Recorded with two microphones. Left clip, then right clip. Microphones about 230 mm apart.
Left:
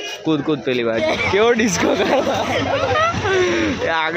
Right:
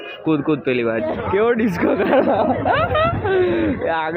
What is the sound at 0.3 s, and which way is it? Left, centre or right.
Speech, centre.